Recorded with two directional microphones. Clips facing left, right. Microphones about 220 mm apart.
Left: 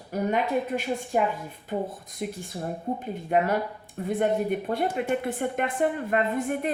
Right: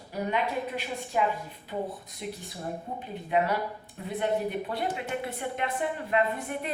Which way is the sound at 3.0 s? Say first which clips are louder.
Left 1 dB; 45° left (ahead or behind).